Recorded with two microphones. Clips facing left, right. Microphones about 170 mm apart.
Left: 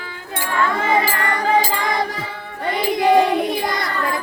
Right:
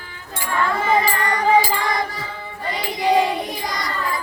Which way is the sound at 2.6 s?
55° left (ahead or behind).